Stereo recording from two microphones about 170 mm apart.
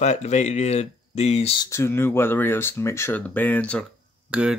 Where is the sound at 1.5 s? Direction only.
20° left (ahead or behind).